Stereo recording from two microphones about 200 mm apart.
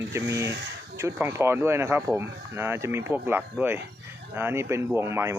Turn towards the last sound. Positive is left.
turn(degrees=-15)  # may be behind; listen again after turning